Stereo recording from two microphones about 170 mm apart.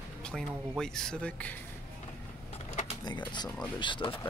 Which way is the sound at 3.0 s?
25° left (ahead or behind).